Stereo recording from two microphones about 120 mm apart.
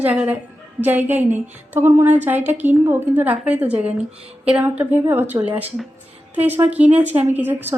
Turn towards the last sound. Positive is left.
turn(degrees=-15)  # may be behind; listen again after turning